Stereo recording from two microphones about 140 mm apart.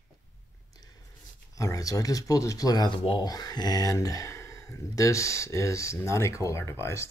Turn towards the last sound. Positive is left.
turn(degrees=20)  # may be behind; listen again after turning